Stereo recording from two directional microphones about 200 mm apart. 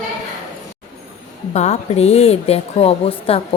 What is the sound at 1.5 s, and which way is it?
A woman's voice, 35° left (ahead or behind).